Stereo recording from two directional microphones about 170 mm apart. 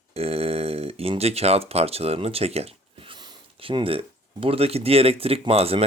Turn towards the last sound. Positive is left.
turn(degrees=-35)  # may be behind; listen again after turning